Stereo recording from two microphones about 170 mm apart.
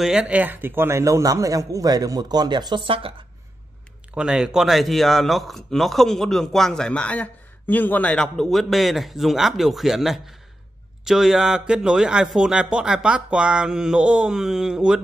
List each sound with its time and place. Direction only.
0.0 s a man's voice: 5° right (ahead or behind); by 3.3 s 30° right (ahead or behind)
4.1 s speech: 5° right (ahead or behind)